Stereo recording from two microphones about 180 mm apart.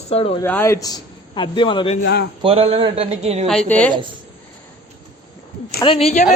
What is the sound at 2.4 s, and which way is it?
A man's voice, 30° right (ahead or behind).